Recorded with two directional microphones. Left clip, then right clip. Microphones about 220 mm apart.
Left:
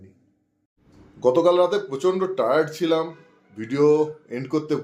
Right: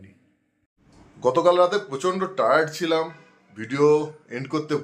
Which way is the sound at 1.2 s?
Centre (ahead or behind).